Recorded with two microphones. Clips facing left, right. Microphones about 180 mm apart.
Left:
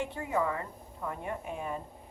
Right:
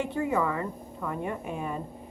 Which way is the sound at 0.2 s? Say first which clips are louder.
Right 4 dB; 90° right.